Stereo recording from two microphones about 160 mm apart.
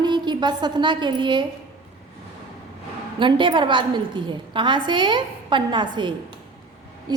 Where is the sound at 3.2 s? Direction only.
30° right (ahead or behind).